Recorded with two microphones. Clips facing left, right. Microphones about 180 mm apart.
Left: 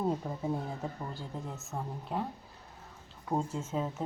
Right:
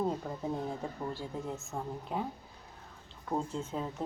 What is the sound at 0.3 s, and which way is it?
Speech, 5° left (ahead or behind).